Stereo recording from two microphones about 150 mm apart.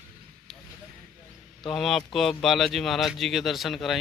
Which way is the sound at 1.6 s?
Centre (ahead or behind).